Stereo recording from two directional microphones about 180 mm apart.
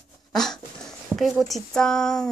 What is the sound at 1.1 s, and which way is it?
Speech, centre (ahead or behind).